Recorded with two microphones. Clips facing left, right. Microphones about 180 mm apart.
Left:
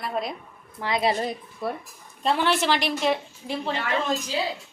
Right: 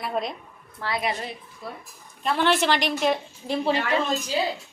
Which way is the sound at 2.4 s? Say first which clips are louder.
Right 4 dB; 5° left (ahead or behind).